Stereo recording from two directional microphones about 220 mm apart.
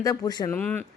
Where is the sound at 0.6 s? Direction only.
5° left (ahead or behind).